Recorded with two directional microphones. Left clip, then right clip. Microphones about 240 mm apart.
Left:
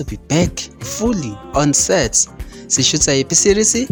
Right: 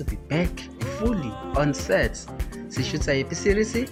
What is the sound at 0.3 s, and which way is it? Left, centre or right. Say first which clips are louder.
A man's voice: left 9 dB; left.